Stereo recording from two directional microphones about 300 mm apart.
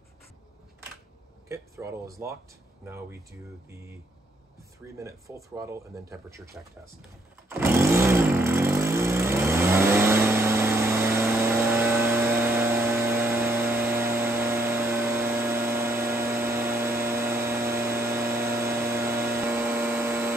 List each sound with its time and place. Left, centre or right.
1.5 s speech: centre
4.9 s speech: centre
7.4 s vehicle: centre